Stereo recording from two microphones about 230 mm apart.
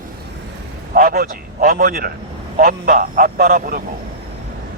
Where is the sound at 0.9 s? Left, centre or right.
Right.